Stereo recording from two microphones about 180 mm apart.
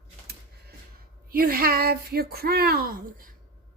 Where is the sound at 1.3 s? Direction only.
55° right (ahead or behind).